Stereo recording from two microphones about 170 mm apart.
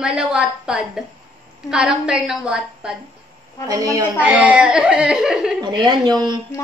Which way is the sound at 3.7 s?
20° right (ahead or behind).